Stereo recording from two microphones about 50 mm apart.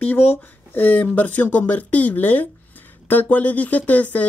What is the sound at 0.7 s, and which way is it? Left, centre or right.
Speech, left.